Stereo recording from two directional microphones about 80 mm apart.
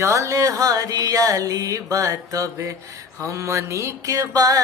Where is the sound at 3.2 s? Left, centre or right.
Right.